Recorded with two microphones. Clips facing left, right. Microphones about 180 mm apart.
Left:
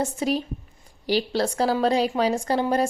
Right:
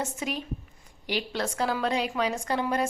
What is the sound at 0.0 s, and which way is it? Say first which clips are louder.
A woman's voice: left 8 dB; 35° left (ahead or behind).